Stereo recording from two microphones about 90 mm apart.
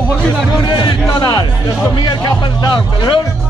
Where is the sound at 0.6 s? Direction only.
60° left (ahead or behind).